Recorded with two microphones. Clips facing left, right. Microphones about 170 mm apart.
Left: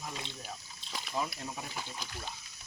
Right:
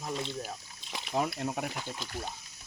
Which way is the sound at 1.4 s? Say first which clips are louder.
Right 8 dB; 60° right (ahead or behind).